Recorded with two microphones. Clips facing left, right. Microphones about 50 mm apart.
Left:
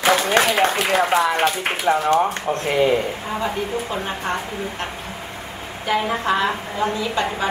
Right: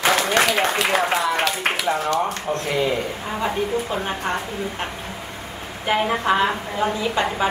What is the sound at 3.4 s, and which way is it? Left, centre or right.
A woman's voice, centre.